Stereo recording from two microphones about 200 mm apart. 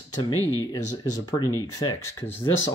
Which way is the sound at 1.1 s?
20° left (ahead or behind).